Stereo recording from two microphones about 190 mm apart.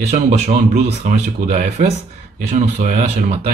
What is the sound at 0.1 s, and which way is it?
Speech, 35° right (ahead or behind).